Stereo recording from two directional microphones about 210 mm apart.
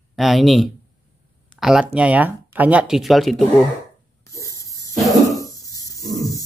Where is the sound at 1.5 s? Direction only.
Centre (ahead or behind).